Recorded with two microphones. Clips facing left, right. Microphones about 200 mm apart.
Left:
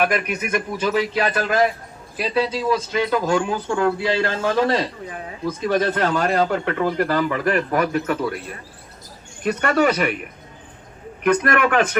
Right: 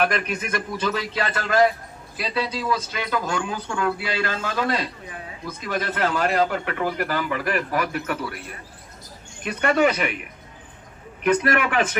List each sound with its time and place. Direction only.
0.0 s a man's voice: 10° left (ahead or behind); by 8.2 s 40° left (ahead or behind)
9.4 s speech: 40° left (ahead or behind)
11.3 s speech: 45° left (ahead or behind)